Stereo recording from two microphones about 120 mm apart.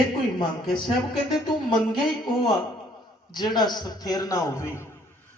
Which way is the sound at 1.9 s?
35° left (ahead or behind).